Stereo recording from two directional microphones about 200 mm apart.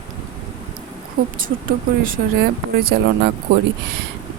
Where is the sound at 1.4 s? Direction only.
45° right (ahead or behind).